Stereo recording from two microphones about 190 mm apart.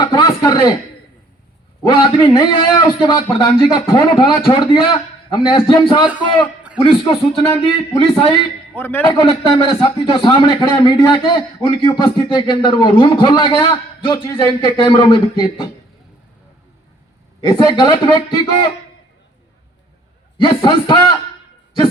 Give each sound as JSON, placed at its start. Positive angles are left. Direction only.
{"t": 0.0, "sound": "speech", "side_deg": 25}
{"t": 1.9, "sound": "speech", "side_deg": 25}
{"t": 8.7, "sound": "a man's voice", "side_deg": 10}
{"t": 9.0, "sound": "speech", "side_deg": 30}
{"t": 17.4, "sound": "speech", "side_deg": 25}
{"t": 20.4, "sound": "speech", "side_deg": 25}